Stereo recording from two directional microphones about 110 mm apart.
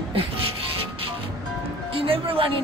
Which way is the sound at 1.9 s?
55° right (ahead or behind).